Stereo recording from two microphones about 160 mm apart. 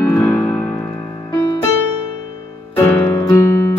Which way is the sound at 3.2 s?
20° left (ahead or behind).